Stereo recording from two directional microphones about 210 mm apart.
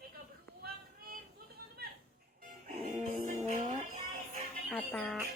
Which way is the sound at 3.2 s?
40° right (ahead or behind).